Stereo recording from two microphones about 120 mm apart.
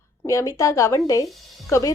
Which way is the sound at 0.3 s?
25° left (ahead or behind).